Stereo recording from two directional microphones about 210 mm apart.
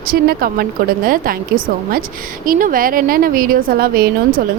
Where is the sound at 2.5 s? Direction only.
40° right (ahead or behind).